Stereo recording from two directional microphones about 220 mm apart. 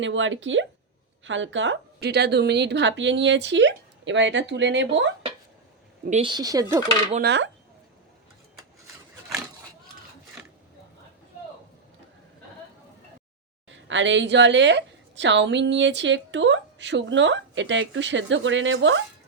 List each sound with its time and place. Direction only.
0.0 s a woman's voice: 60° right (ahead or behind)
6.1 s speech: 25° right (ahead or behind)
7.2 s speech: 55° right (ahead or behind)
13.7 s a woman's voice: 55° right (ahead or behind)